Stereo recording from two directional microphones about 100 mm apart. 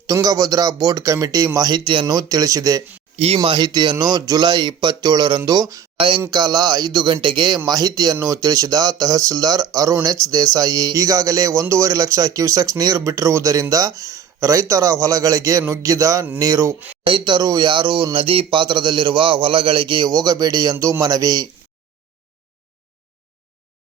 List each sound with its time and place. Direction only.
0.1 s speech: 35° right (ahead or behind)
2.0 s speech: 40° right (ahead or behind)
3.2 s speech: 75° right (ahead or behind); by 16.7 s 35° right (ahead or behind)
17.1 s speech: 55° right (ahead or behind)
20.1 s speech: 40° right (ahead or behind)
20.7 s speech: 30° right (ahead or behind)